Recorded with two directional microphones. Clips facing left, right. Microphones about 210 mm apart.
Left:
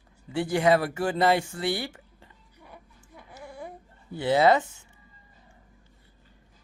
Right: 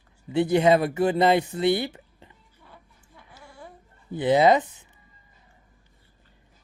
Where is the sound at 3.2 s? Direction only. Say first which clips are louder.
Left 5 dB; 20° left (ahead or behind).